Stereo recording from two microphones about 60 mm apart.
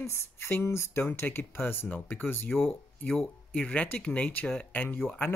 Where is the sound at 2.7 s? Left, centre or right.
Centre.